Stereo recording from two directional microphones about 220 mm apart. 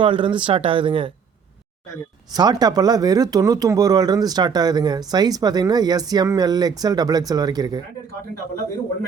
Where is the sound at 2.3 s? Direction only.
20° right (ahead or behind).